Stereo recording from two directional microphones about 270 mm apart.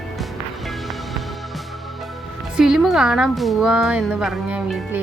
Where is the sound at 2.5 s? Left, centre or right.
Centre.